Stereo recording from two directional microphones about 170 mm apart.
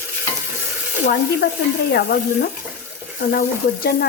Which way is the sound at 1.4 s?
70° left (ahead or behind).